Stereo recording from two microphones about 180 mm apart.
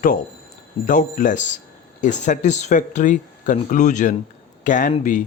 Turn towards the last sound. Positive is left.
turn(degrees=45)  # may be behind; listen again after turning